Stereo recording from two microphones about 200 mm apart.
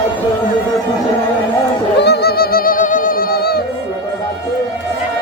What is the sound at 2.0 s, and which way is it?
Music, 55° left (ahead or behind).